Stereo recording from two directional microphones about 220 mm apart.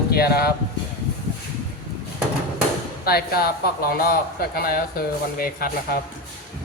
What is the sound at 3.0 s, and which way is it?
Speech, 45° left (ahead or behind).